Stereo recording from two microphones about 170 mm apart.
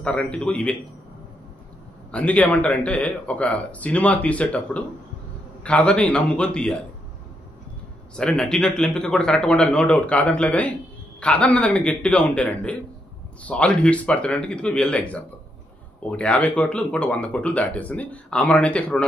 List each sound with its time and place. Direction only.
0.0 s speech: 5° left (ahead or behind)
2.0 s speech: 10° left (ahead or behind)
8.2 s a man's voice: 5° left (ahead or behind)